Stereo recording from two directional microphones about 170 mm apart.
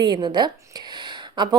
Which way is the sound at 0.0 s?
25° right (ahead or behind).